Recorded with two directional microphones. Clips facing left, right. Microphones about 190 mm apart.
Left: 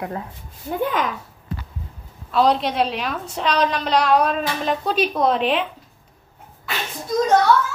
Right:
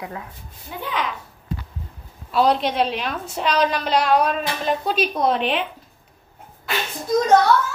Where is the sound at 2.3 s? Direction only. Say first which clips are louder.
Even; centre (ahead or behind).